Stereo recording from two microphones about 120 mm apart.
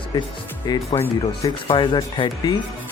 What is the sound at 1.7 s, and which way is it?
Speech, 45° left (ahead or behind).